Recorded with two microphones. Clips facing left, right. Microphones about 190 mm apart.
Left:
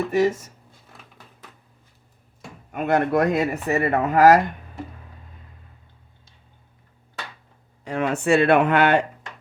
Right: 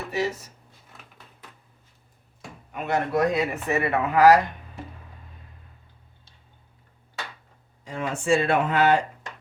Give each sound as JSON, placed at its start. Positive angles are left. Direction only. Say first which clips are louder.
{"t": 0.1, "sound": "speech", "louder": "left 6 dB", "side_deg": 50}
{"t": 2.7, "sound": "speech", "louder": "left 4 dB", "side_deg": 55}
{"t": 3.5, "sound": "speech", "louder": "left 3 dB", "side_deg": 40}
{"t": 7.9, "sound": "speech", "louder": "left 3 dB", "side_deg": 65}